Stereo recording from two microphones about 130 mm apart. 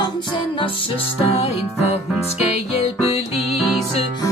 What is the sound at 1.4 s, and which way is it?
Music, 50° left (ahead or behind).